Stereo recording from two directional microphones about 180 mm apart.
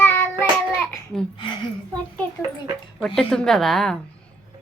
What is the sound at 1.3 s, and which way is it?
Speech, 25° left (ahead or behind).